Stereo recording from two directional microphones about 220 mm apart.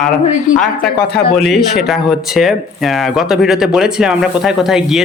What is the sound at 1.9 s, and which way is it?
A man's voice, centre (ahead or behind).